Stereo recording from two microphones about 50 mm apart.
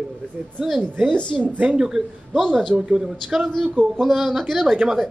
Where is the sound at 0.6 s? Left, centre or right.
Centre.